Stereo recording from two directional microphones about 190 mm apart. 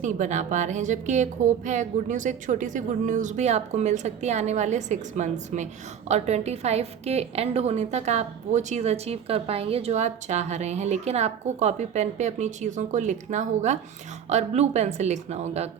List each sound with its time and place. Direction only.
0.0 s a woman's voice: 40° right (ahead or behind)